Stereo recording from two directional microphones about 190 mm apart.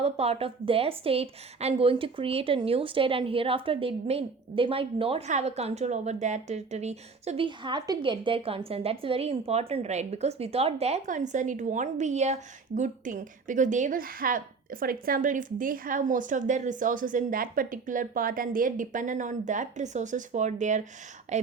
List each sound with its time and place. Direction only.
0.0 s a woman's voice: 30° right (ahead or behind)